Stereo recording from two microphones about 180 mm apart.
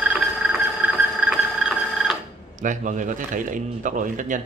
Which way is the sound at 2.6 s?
45° right (ahead or behind).